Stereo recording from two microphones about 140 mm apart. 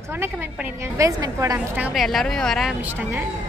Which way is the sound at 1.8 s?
5° right (ahead or behind).